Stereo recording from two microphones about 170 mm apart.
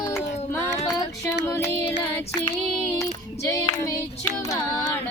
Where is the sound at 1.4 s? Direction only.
15° left (ahead or behind).